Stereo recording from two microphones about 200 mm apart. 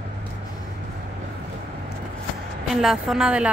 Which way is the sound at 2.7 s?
Centre (ahead or behind).